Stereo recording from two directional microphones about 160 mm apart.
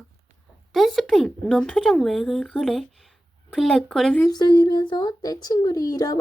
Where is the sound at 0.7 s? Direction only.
Centre (ahead or behind).